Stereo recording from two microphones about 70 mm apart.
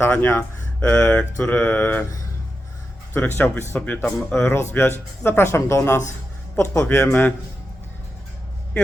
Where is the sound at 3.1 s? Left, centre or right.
Left.